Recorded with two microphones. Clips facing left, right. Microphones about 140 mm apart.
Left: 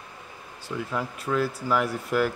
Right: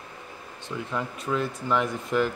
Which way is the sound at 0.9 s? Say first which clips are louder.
Even; 5° left (ahead or behind).